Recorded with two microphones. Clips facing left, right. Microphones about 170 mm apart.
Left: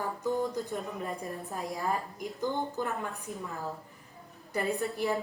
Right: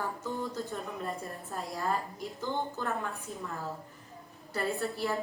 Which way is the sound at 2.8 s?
15° left (ahead or behind).